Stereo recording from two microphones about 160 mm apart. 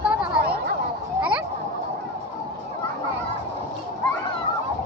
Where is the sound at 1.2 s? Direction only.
5° right (ahead or behind).